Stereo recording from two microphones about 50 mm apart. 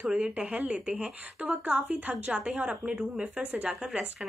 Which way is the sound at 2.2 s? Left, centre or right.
Right.